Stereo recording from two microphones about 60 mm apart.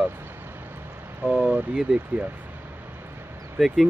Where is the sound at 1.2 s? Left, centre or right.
Right.